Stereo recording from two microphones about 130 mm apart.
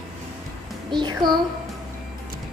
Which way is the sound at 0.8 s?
35° right (ahead or behind).